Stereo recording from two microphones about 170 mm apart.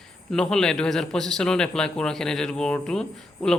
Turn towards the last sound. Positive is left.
turn(degrees=5)  # may be behind; listen again after turning